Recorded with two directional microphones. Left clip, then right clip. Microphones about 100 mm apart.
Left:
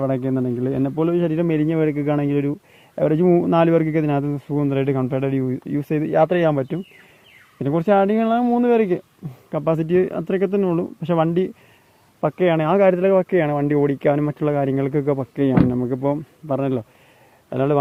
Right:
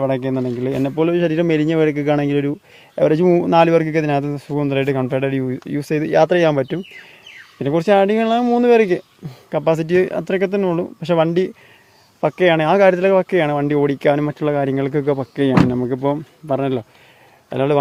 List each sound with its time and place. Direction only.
0.0 s speech: 30° right (ahead or behind)
6.1 s speech: 55° right (ahead or behind)
7.6 s speech: 30° right (ahead or behind)